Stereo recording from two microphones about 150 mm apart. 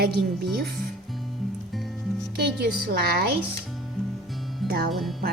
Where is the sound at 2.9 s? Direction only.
90° right.